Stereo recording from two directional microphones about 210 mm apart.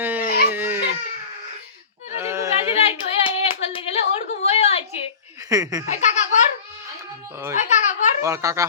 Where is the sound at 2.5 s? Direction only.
30° left (ahead or behind).